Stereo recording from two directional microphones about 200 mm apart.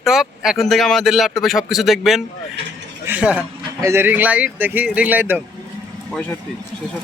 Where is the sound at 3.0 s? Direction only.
5° right (ahead or behind).